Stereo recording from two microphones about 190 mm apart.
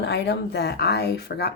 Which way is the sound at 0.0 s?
60° left (ahead or behind).